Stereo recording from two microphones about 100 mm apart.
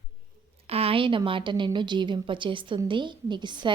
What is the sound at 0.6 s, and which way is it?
A woman's voice, 85° right.